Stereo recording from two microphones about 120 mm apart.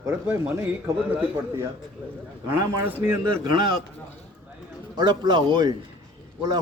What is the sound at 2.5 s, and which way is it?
Speech, 20° right (ahead or behind).